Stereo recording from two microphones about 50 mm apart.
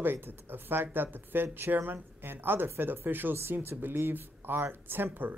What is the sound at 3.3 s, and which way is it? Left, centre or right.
Speech, right.